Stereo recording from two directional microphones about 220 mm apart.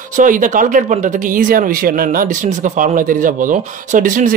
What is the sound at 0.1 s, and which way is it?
Speech, 35° right (ahead or behind).